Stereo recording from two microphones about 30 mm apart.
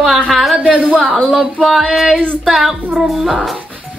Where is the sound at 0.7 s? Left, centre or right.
Right.